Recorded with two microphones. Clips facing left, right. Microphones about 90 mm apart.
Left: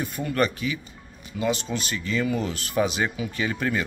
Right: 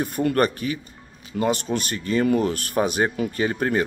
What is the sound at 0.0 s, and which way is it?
Speech, 50° right (ahead or behind).